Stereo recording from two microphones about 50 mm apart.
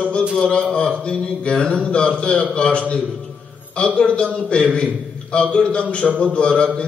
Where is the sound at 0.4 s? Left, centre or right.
Centre.